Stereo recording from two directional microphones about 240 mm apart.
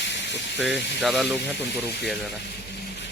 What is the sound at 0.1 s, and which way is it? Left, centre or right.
Steam, left.